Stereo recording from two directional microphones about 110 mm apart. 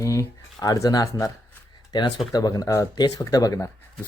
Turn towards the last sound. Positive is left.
turn(degrees=30)  # may be behind; listen again after turning